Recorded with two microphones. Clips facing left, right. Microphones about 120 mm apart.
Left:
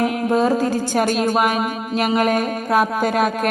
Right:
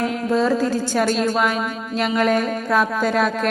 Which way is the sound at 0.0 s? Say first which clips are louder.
Left 2 dB; 55° left (ahead or behind).